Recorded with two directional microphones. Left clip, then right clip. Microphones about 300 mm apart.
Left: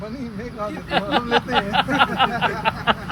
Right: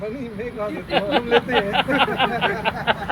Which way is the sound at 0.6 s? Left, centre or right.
Centre.